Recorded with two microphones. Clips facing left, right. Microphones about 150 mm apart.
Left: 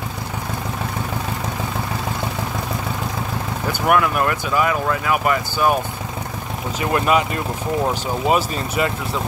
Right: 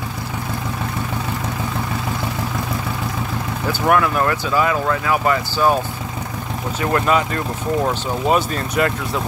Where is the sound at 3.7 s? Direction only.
10° left (ahead or behind).